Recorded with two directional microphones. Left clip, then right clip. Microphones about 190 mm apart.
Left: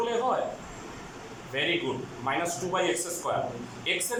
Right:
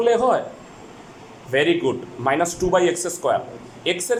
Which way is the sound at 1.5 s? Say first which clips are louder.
Right 10 dB; 55° right (ahead or behind).